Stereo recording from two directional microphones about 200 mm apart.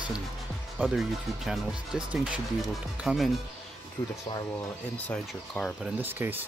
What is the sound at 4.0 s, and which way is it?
Speech, 25° left (ahead or behind).